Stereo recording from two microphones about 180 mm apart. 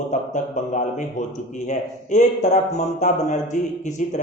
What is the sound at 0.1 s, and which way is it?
A man's voice, 40° left (ahead or behind).